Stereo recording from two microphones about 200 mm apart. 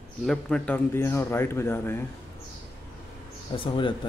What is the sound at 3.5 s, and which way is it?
Speech, 25° left (ahead or behind).